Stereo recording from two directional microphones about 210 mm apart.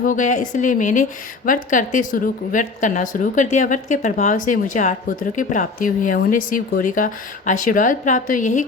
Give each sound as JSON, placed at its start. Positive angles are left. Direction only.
{"t": 0.0, "sound": "a woman's voice", "side_deg": 35}